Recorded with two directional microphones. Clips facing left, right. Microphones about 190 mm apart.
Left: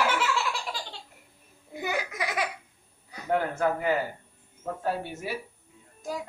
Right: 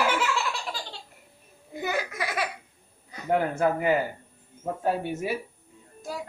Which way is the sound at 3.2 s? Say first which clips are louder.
Right 2 dB; 15° right (ahead or behind).